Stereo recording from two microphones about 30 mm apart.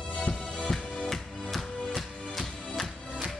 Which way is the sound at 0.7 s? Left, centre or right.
Centre.